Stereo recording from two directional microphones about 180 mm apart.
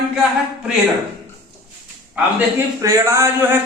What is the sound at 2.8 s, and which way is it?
Speech, 15° right (ahead or behind).